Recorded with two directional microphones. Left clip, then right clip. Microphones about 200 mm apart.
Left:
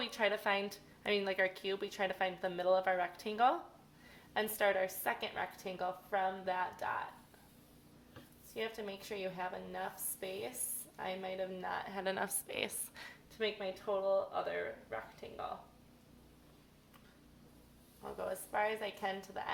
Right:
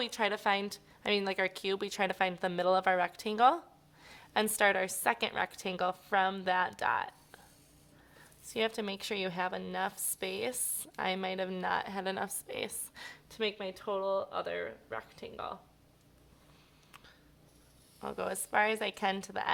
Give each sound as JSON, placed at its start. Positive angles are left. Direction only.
{"t": 0.0, "sound": "a woman's voice", "side_deg": -35}
{"t": 8.5, "sound": "a woman's voice", "side_deg": -40}
{"t": 18.0, "sound": "a woman's voice", "side_deg": -45}